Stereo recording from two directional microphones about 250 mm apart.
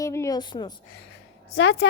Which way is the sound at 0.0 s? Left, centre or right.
Centre.